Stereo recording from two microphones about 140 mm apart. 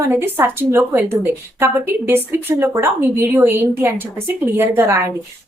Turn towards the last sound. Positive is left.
turn(degrees=-20)  # may be behind; listen again after turning